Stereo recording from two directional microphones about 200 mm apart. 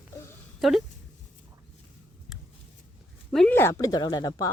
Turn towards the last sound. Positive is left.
turn(degrees=20)  # may be behind; listen again after turning